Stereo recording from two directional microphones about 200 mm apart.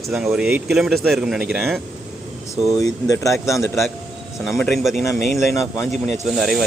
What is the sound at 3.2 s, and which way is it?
Speech, 15° left (ahead or behind).